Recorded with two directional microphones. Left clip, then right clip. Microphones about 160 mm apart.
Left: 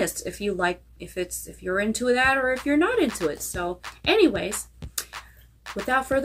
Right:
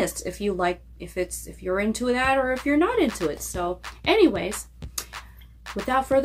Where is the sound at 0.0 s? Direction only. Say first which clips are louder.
Right 1 dB; 10° right (ahead or behind).